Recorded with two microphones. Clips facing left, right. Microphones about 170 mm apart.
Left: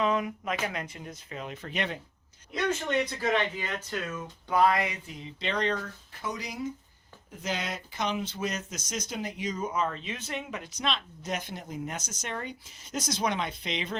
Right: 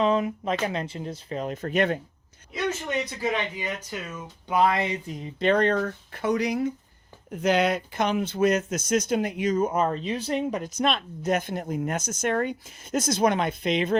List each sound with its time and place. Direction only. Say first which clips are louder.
0.0 s speech: right 5 dB; 30° right (ahead or behind); by 2.0 s 50° right (ahead or behind)
2.5 s speech: even; 10° right (ahead or behind); by 4.9 s 25° right (ahead or behind)
5.0 s speech: right 11 dB; 50° right (ahead or behind)